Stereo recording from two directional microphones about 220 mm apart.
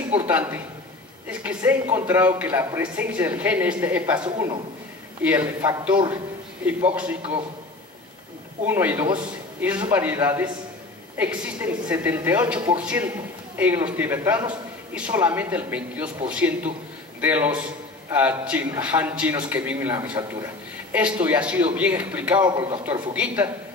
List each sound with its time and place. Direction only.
0.2 s speech: 10° right (ahead or behind)
4.2 s a man's voice: 20° right (ahead or behind)
5.2 s speech: 5° right (ahead or behind)
8.6 s speech: 10° right (ahead or behind)
22.4 s a man's voice: 20° right (ahead or behind)